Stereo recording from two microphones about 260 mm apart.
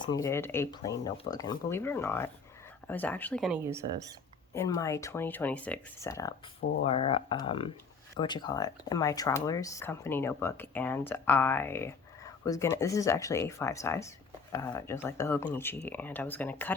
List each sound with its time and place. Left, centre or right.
0.0 s speech: centre
4.5 s speech: centre
6.8 s speech: left; by 16.7 s centre